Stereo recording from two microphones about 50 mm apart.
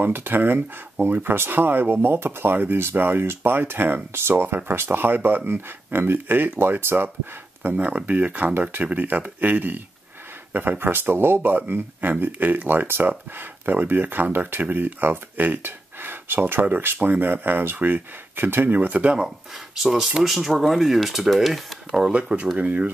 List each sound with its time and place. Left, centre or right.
0.0 s speech: right
7.7 s speech: right
11.5 s speech: right
18.8 s speech: right
19.1 s speech: centre
22.1 s speech: right